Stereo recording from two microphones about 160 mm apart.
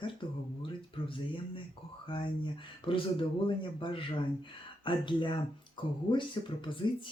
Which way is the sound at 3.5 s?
30° left (ahead or behind).